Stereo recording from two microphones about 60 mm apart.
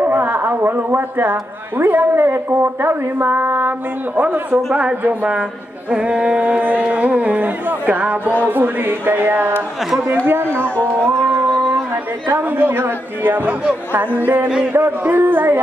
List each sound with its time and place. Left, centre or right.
0.0 s a sound: right
1.3 s a woman's voice: right
5.9 s a woman's voice: centre; by 9.5 s right
10.6 s music: left
12.3 s a woman's voice: right